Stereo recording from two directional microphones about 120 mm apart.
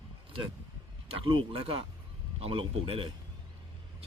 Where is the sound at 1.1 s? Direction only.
50° right (ahead or behind).